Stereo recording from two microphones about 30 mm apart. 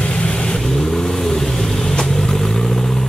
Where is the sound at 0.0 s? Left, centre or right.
Left.